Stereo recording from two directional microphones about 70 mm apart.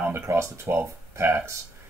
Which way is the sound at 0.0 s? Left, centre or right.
Right.